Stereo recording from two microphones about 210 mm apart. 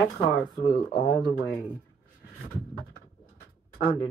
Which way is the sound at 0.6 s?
30° left (ahead or behind).